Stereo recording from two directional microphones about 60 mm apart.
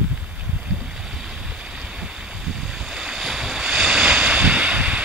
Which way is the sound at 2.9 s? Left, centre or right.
Centre.